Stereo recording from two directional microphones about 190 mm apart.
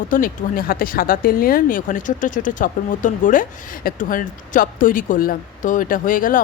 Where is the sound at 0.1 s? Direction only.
50° left (ahead or behind).